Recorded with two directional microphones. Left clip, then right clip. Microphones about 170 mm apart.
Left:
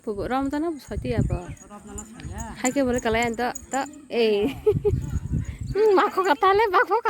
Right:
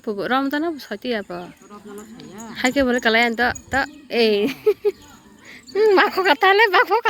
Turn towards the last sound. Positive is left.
turn(degrees=5)  # may be behind; listen again after turning